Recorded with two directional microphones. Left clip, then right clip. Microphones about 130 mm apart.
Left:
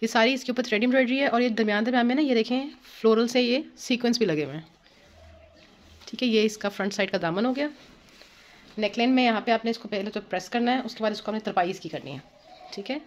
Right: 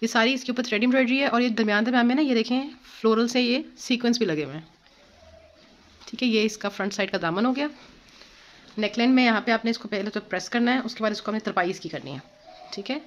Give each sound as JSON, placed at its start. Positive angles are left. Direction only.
{"t": 0.0, "sound": "speech", "side_deg": 10}
{"t": 6.0, "sound": "speech", "side_deg": 10}
{"t": 7.4, "sound": "speech", "side_deg": -10}
{"t": 8.7, "sound": "speech", "side_deg": -15}